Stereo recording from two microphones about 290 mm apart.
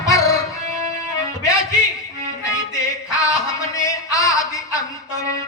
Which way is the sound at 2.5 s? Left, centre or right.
Centre.